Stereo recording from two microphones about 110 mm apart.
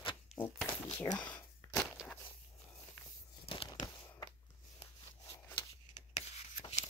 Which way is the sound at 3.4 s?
60° left (ahead or behind).